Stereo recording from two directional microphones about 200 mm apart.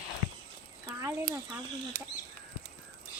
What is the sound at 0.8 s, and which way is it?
Speech, 15° right (ahead or behind).